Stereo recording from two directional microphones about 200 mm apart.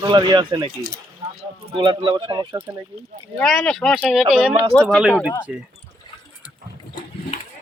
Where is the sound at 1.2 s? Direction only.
35° right (ahead or behind).